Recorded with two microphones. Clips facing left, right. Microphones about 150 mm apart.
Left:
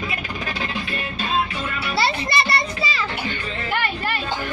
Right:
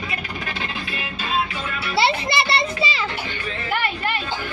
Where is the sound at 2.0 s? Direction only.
20° right (ahead or behind).